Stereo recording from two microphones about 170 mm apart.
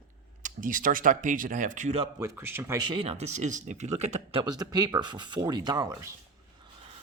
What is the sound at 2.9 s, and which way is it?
Speech, 35° right (ahead or behind).